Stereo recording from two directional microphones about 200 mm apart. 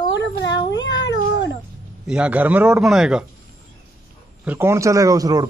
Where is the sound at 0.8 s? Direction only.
65° left (ahead or behind).